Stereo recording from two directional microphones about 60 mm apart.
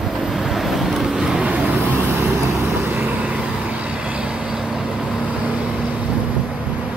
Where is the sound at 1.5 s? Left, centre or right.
Right.